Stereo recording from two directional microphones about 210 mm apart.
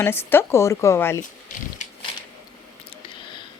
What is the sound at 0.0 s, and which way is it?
A woman's voice, 10° left (ahead or behind).